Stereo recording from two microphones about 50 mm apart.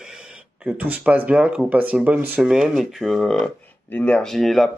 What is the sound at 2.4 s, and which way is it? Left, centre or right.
Speech, centre.